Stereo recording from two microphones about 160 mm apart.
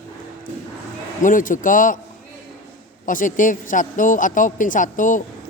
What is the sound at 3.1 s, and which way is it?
Speech, 55° left (ahead or behind).